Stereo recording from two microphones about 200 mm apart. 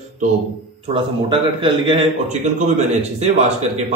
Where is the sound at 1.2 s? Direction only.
25° right (ahead or behind).